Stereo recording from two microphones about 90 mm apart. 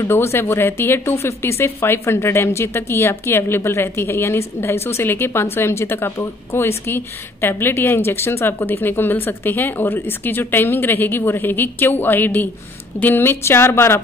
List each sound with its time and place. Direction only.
0.0 s speech: 30° left (ahead or behind)